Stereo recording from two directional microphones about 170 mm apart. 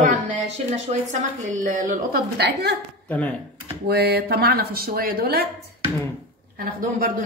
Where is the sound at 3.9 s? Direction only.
70° right (ahead or behind).